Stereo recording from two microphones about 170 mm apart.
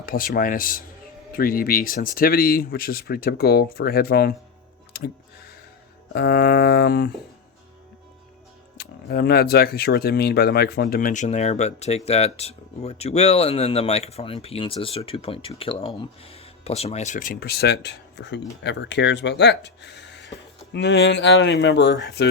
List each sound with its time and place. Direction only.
0.0 s speech: 55° left (ahead or behind)
4.9 s a sound: 65° left (ahead or behind)
6.1 s speech: 70° left (ahead or behind)
8.8 s speech: 70° left (ahead or behind)